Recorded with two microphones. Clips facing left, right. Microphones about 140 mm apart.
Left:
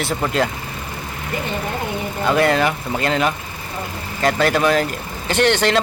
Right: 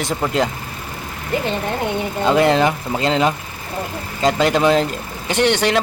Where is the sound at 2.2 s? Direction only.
20° right (ahead or behind).